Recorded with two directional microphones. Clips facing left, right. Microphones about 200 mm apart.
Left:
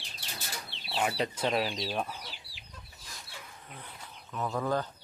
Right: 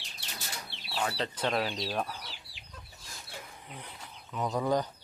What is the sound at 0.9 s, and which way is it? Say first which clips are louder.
Chicken: left 2 dB; 20° left (ahead or behind).